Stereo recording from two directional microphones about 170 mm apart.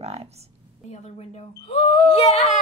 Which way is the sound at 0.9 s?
40° left (ahead or behind).